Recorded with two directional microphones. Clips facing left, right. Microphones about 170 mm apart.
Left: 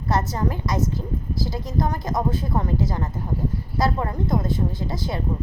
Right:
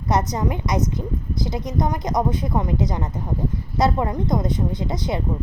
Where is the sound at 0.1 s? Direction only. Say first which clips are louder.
Right 2 dB; 20° right (ahead or behind).